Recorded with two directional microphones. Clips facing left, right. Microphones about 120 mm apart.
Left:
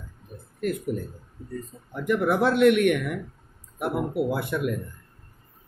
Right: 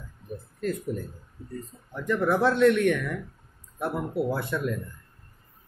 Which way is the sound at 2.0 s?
15° left (ahead or behind).